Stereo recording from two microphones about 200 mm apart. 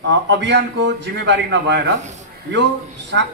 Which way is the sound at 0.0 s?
60° right (ahead or behind).